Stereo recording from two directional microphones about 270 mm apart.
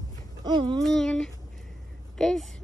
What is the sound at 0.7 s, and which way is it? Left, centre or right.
A woman's voice, centre.